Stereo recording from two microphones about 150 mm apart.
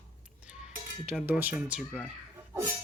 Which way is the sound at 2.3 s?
20° right (ahead or behind).